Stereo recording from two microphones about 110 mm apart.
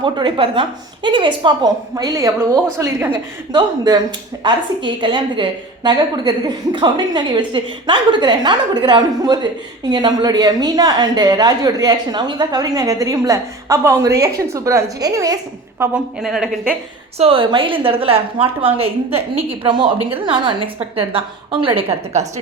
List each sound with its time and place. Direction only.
0.0 s a woman's voice: 45° right (ahead or behind); by 3.1 s 25° right (ahead or behind)
3.1 s a woman's voice: 40° right (ahead or behind); by 15.9 s 25° right (ahead or behind)
16.2 s a woman's voice: 5° right (ahead or behind)
17.2 s a woman's voice: 55° right (ahead or behind); by 22.3 s 75° right (ahead or behind)